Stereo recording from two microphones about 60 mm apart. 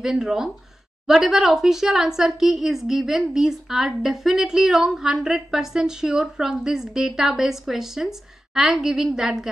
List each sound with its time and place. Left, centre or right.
0.0 s a woman's voice: centre